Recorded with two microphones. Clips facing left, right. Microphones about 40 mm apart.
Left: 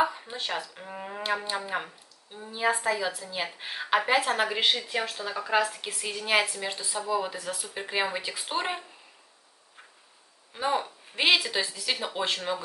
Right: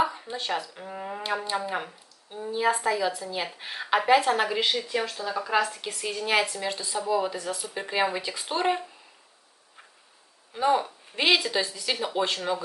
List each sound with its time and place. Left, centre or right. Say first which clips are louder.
0.0 s a sound: even; centre
0.7 s a woman's voice: right 2 dB; centre
4.6 s speech: even; left
5.3 s a woman's voice: even; centre
10.5 s a woman's voice: right 4 dB; centre